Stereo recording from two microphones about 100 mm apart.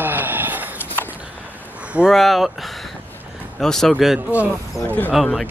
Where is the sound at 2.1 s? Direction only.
Centre (ahead or behind).